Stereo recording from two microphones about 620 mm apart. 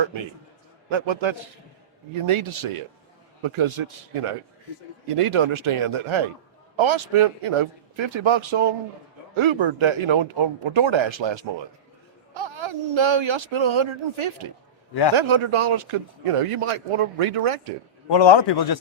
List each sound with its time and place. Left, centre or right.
0.9 s speech: right
18.1 s a man's voice: left